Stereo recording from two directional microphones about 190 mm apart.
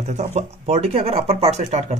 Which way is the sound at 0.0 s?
35° right (ahead or behind).